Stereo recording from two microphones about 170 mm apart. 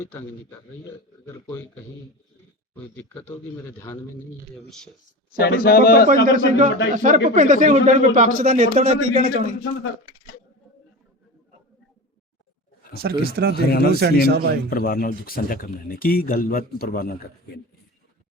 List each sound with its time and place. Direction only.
0.0 s a man's voice: 15° left (ahead or behind)
5.3 s speech: 60° left (ahead or behind)
6.2 s a man's voice: 50° right (ahead or behind)
12.9 s speech: 65° right (ahead or behind)
13.6 s speech: 65° left (ahead or behind)
14.0 s speech: 70° right (ahead or behind)
14.7 s speech: 60° left (ahead or behind)